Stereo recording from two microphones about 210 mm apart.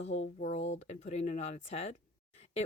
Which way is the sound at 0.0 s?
35° left (ahead or behind).